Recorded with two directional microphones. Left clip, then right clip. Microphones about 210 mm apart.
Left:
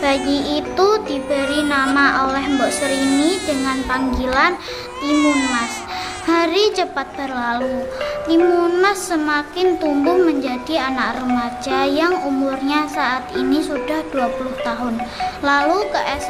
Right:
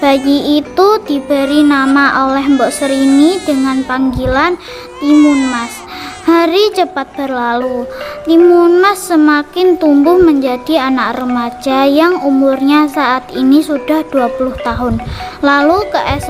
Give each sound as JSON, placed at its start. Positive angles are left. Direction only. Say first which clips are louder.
{"t": 0.3, "sound": "a child's voice", "louder": "right 8 dB", "side_deg": -50}
{"t": 2.8, "sound": "baby cry", "louder": "right 7 dB", "side_deg": 0}
{"t": 3.8, "sound": "a child's voice", "louder": "right 5 dB", "side_deg": -45}
{"t": 5.0, "sound": "baby cry", "louder": "right 8 dB", "side_deg": 0}
{"t": 6.2, "sound": "a child's voice", "louder": "right 7 dB", "side_deg": -50}